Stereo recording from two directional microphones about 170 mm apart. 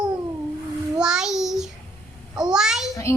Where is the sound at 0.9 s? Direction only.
5° right (ahead or behind).